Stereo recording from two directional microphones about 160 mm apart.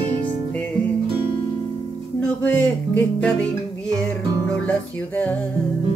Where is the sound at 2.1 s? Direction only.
10° left (ahead or behind).